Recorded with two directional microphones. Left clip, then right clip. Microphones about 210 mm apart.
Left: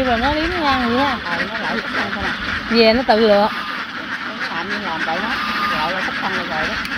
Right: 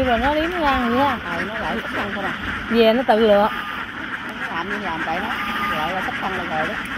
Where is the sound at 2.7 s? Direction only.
Centre (ahead or behind).